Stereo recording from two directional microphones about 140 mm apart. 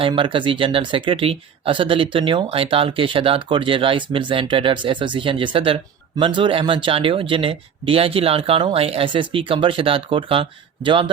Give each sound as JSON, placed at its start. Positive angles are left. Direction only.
{"t": 0.1, "sound": "speech", "side_deg": -35}